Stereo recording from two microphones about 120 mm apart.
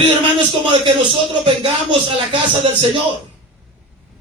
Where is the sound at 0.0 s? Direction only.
40° right (ahead or behind).